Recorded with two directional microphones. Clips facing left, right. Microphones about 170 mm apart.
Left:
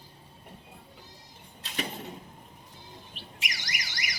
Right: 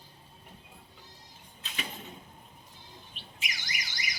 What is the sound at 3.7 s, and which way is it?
Alarm, 85° left.